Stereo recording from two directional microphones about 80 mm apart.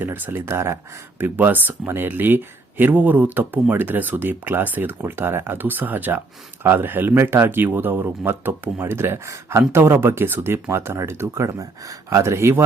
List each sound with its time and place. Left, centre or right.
0.0 s speech: right
11.4 s speech: right